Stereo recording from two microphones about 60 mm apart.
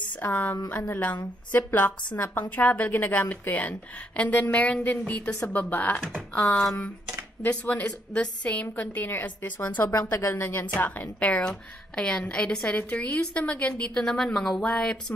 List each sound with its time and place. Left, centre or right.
0.2 s a woman's voice: left
7.4 s a woman's voice: left
8.7 s a woman's voice: left
10.1 s a woman's voice: left
11.4 s a woman's voice: centre